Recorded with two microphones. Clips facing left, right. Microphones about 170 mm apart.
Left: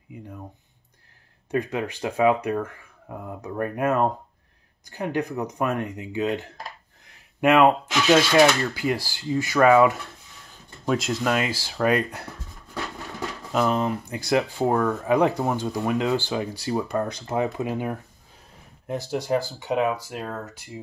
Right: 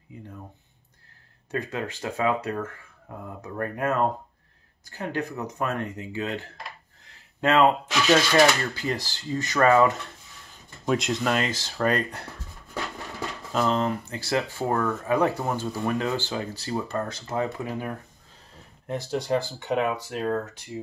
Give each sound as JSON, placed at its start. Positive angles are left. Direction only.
{"t": 0.1, "sound": "speech", "side_deg": 15}
{"t": 1.5, "sound": "speech", "side_deg": 15}
{"t": 13.5, "sound": "speech", "side_deg": 10}
{"t": 18.9, "sound": "speech", "side_deg": 10}